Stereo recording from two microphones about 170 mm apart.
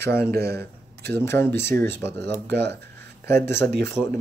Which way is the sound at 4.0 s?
Centre (ahead or behind).